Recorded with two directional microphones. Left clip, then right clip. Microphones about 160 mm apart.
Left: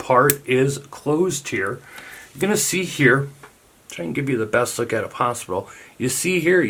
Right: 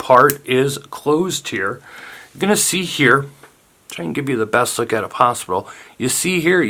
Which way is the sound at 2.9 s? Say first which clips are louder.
Right 3 dB; 25° right (ahead or behind).